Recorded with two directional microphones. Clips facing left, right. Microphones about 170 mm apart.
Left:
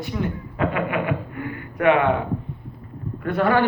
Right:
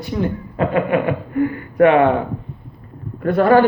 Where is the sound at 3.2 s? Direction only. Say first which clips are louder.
Right 7 dB; 40° right (ahead or behind).